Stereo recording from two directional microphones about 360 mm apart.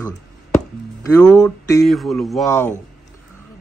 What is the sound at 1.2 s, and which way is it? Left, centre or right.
Speech, centre.